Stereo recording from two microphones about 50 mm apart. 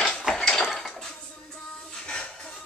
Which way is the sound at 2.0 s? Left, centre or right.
Centre.